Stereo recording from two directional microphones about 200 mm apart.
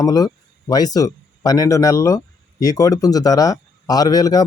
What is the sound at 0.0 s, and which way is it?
Speech, 20° left (ahead or behind).